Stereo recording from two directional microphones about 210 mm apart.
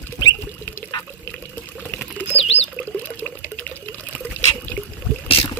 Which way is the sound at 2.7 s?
10° left (ahead or behind).